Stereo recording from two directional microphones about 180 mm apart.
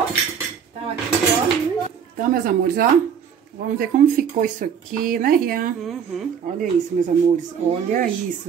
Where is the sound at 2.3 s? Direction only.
55° right (ahead or behind).